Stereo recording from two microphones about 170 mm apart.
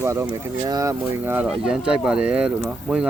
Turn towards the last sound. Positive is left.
turn(degrees=-5)  # may be behind; listen again after turning